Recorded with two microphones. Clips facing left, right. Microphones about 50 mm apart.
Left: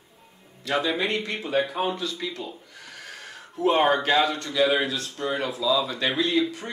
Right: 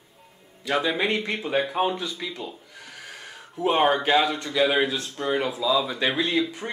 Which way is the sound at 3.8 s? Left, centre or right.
Centre.